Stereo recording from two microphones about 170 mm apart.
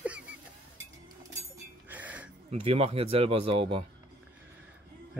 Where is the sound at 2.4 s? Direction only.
35° right (ahead or behind).